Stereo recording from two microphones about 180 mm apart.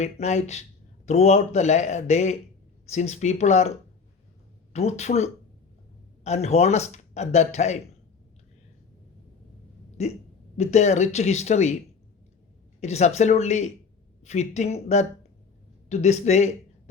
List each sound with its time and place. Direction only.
0.0 s speech: 40° left (ahead or behind)
4.7 s speech: 35° left (ahead or behind)
10.0 s speech: 40° left (ahead or behind)
12.8 s a man's voice: 40° left (ahead or behind)